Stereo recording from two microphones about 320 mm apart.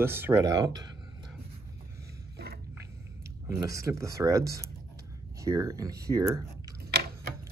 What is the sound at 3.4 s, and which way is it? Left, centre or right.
Speech, centre.